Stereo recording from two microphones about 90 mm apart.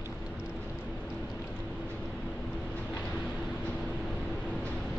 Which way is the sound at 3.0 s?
5° left (ahead or behind).